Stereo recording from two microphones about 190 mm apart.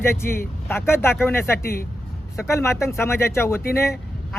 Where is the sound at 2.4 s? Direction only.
15° left (ahead or behind).